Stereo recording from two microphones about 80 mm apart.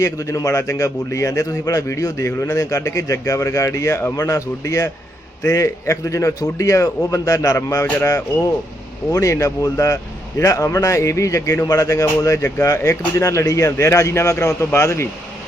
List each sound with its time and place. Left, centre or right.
0.0 s a man's voice: left